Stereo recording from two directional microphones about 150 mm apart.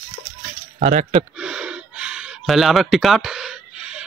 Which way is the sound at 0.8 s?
55° right (ahead or behind).